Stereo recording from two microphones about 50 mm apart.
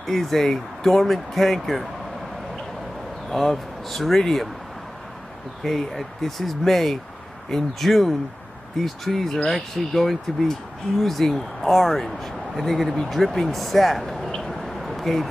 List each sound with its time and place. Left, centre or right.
0.0 s speech: centre
3.3 s speech: centre
5.6 s speech: centre
14.5 s a sound: centre